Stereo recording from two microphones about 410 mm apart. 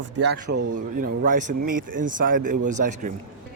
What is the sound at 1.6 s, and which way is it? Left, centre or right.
Speech, right.